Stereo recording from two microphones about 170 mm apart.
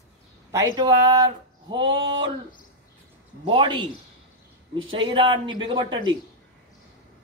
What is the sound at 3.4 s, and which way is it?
Speech, 30° right (ahead or behind).